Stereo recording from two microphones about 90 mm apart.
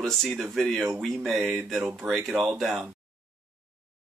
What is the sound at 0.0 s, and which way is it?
Speech, 5° left (ahead or behind).